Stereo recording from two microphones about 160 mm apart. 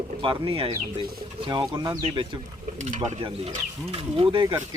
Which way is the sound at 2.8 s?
45° right (ahead or behind).